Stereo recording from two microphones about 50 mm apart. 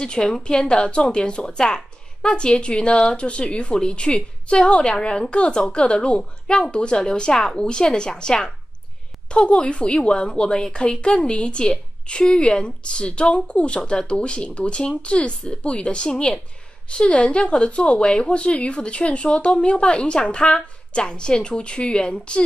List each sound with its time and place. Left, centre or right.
0.0 s a woman's voice: centre